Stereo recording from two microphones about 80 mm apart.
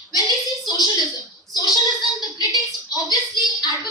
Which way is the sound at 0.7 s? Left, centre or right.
Left.